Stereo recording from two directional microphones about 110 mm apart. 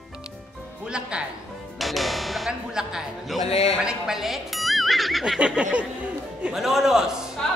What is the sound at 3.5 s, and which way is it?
Speech, 65° left (ahead or behind).